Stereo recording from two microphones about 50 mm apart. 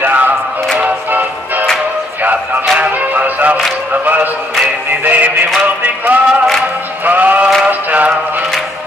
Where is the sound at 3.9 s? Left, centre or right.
Right.